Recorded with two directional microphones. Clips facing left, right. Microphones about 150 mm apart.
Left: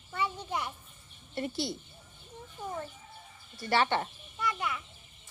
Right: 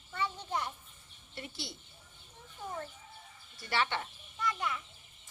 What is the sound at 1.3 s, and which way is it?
Speech, 45° left (ahead or behind).